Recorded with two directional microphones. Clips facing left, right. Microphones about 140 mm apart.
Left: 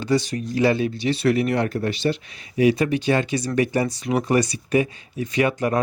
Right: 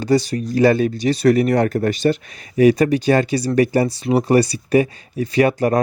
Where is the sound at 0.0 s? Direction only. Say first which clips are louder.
Right 4 dB; 40° right (ahead or behind).